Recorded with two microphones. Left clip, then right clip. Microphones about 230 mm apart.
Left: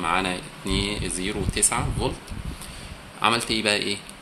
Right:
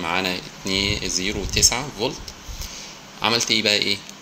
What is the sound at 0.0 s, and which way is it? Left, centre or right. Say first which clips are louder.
Speech: right 1 dB; centre.